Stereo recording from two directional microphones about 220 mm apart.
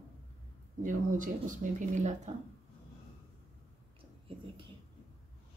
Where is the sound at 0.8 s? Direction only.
35° right (ahead or behind).